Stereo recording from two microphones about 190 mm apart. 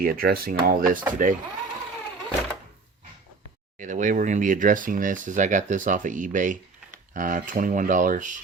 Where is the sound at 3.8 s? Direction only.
40° right (ahead or behind).